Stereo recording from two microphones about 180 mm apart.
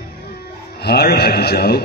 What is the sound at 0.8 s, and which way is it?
Speech, 60° left (ahead or behind).